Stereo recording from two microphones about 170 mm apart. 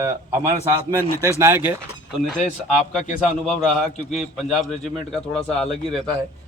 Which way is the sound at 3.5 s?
40° left (ahead or behind).